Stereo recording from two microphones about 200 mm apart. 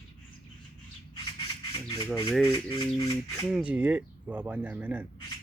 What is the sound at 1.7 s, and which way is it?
Squawk, 25° left (ahead or behind).